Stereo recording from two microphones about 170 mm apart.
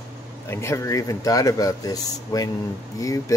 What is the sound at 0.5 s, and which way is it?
Speech, 15° left (ahead or behind).